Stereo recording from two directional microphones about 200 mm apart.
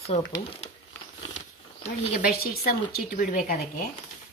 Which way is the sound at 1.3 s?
40° left (ahead or behind).